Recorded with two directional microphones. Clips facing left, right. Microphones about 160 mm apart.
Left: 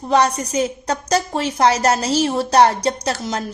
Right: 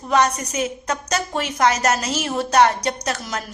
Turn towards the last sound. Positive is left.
turn(degrees=30)  # may be behind; listen again after turning